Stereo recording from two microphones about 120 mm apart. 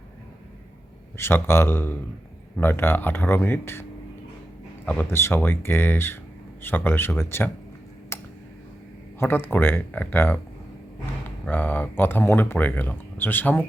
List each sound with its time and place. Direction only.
1.1 s speech: 20° left (ahead or behind)
5.1 s speech: 20° left (ahead or behind)
8.1 s clicking: 20° left (ahead or behind)
9.1 s speech: 20° left (ahead or behind)
11.4 s speech: 15° left (ahead or behind)